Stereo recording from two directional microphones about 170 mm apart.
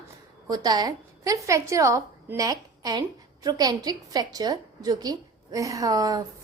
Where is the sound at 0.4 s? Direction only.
25° right (ahead or behind).